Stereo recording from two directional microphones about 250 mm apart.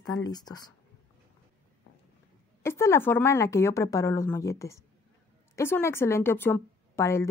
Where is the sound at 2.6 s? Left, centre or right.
Centre.